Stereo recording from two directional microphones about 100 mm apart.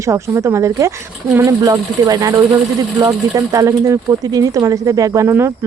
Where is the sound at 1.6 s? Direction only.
40° right (ahead or behind).